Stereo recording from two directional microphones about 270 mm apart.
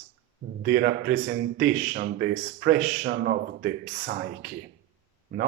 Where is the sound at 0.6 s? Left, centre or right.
Right.